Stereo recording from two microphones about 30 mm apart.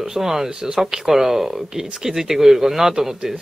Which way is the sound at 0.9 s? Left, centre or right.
Centre.